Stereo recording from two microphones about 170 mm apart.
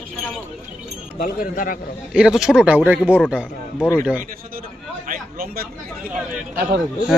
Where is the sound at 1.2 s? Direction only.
55° left (ahead or behind).